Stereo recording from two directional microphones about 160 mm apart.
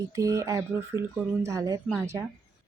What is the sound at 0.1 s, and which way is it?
Speech, 20° right (ahead or behind).